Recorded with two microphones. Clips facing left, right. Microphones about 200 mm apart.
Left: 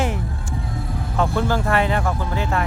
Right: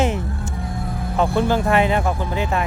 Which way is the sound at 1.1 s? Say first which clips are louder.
Right 3 dB; 20° right (ahead or behind).